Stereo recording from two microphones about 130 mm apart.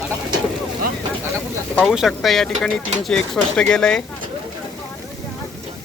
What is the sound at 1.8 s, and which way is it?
Speech, 5° right (ahead or behind).